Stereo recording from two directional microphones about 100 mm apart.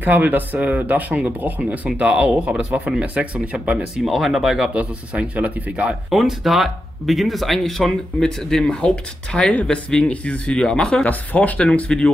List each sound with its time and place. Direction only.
0.0 s speech: 20° right (ahead or behind); by 4.6 s 5° right (ahead or behind)
4.7 s speech: 15° right (ahead or behind)
6.0 s speech: centre (ahead or behind)